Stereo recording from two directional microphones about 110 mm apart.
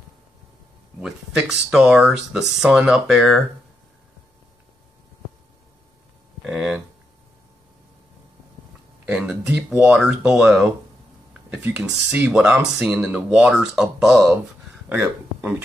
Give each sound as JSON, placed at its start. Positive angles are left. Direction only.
{"t": 1.0, "sound": "speech", "side_deg": -5}
{"t": 6.4, "sound": "a sound", "side_deg": -10}
{"t": 9.0, "sound": "speech", "side_deg": -5}
{"t": 11.6, "sound": "speech", "side_deg": -10}